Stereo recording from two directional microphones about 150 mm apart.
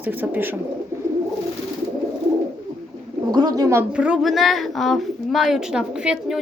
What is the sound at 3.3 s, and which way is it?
Speech, 25° right (ahead or behind).